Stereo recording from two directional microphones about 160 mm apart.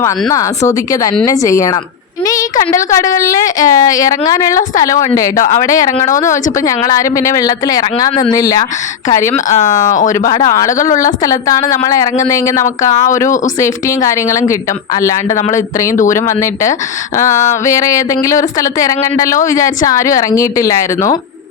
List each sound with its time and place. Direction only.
0.0 s a woman's voice: 20° left (ahead or behind)
9.5 s speech: 45° left (ahead or behind)
10.1 s a woman's voice: 25° left (ahead or behind)
13.6 s a woman's voice: 20° left (ahead or behind)